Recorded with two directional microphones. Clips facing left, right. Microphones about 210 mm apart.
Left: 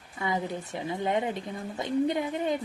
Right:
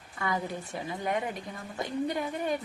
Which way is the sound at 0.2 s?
20° left (ahead or behind).